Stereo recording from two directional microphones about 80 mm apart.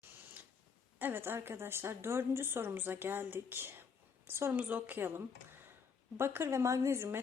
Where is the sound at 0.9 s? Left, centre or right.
Right.